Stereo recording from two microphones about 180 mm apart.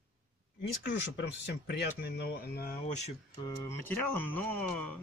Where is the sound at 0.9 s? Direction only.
75° left (ahead or behind); by 2.7 s 60° left (ahead or behind).